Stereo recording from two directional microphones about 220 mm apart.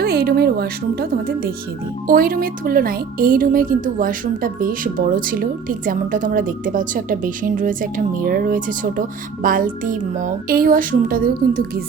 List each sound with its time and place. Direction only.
0.0 s speech: 45° right (ahead or behind)
2.0 s speech: 40° right (ahead or behind)